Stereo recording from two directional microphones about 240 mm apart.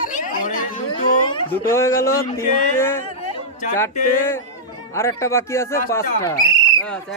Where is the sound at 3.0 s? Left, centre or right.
Left.